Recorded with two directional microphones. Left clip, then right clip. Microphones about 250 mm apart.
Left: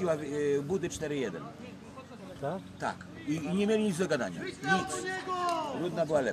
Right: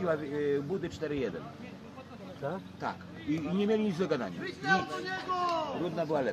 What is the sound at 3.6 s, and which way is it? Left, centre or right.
Speech, left.